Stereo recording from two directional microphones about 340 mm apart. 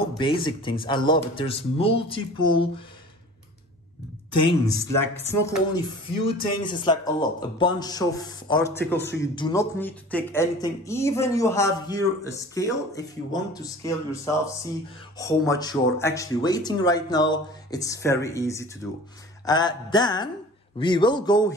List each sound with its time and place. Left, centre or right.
0.5 s speech: centre
5.0 s speech: centre
8.9 s speech: left
9.2 s speech: centre